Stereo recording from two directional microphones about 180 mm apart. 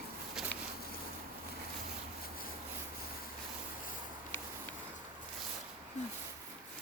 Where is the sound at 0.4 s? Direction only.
Centre (ahead or behind).